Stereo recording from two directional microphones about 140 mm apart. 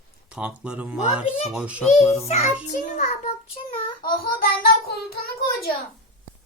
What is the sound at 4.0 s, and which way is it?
Child singing, 90° left.